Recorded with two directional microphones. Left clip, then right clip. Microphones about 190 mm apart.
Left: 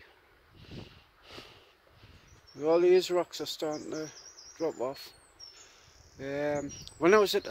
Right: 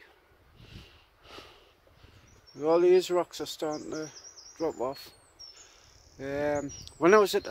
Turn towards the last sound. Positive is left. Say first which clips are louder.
# right 2 dB
turn(degrees=-15)  # may be behind; listen again after turning